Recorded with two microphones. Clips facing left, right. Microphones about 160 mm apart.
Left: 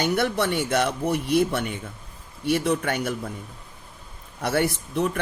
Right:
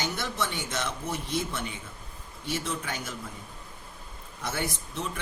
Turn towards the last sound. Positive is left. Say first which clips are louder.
# left 10 dB
turn(degrees=60)  # may be behind; listen again after turning